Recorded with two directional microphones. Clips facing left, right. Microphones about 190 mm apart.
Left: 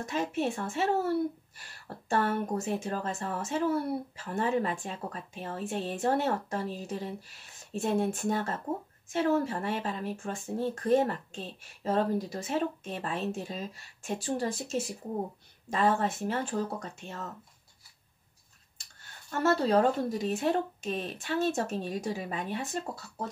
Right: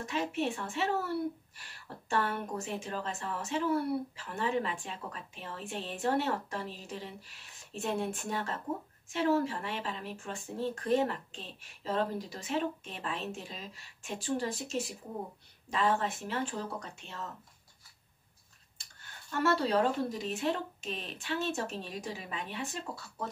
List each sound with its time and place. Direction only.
0.0 s speech: 45° left (ahead or behind)
19.4 s speech: 45° left (ahead or behind)